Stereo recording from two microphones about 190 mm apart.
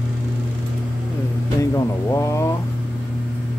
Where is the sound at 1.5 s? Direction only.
15° left (ahead or behind).